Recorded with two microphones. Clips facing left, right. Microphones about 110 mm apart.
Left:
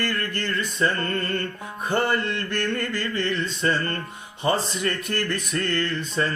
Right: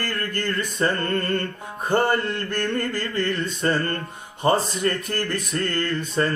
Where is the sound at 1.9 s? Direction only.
45° right (ahead or behind).